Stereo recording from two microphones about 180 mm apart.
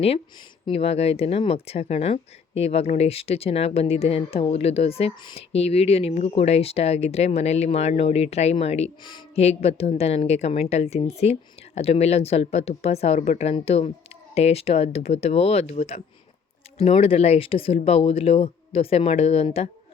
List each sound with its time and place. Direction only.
0.6 s speech: 35° left (ahead or behind)